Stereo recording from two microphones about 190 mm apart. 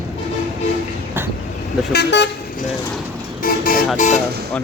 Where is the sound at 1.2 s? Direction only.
10° right (ahead or behind).